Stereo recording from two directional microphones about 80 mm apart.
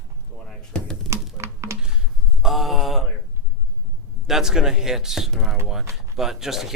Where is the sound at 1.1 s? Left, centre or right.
Right.